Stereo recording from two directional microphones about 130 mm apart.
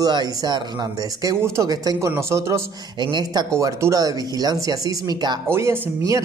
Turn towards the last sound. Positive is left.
turn(degrees=-25)  # may be behind; listen again after turning